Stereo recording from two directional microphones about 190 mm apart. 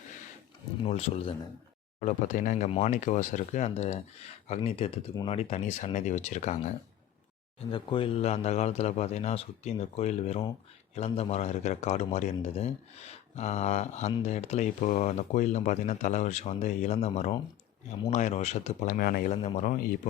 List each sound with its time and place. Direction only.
0.9 s a man's voice: 30° left (ahead or behind)
7.7 s a man's voice: 25° left (ahead or behind); by 19.3 s 50° left (ahead or behind)
19.3 s a man's voice: 35° left (ahead or behind)